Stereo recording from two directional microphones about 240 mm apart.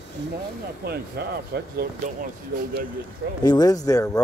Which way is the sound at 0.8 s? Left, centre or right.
Right.